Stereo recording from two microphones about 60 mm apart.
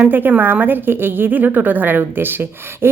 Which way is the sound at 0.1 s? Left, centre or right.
Right.